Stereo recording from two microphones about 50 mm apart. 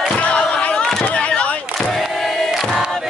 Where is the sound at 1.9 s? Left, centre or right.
Centre.